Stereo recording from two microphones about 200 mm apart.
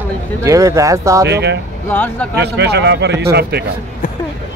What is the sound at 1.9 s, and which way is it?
Speech, 10° left (ahead or behind).